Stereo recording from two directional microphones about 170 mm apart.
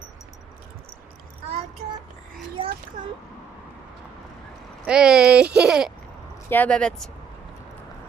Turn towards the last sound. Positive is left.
turn(degrees=5)  # may be behind; listen again after turning